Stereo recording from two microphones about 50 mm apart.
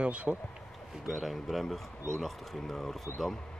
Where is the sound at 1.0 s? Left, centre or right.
Centre.